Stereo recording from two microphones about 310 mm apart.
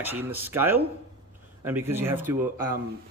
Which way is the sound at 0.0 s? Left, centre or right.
Centre.